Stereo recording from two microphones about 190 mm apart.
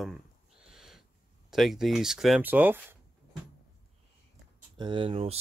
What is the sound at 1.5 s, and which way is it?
Speech, centre (ahead or behind).